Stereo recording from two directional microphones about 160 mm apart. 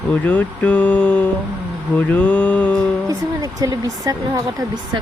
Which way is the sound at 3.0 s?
20° right (ahead or behind).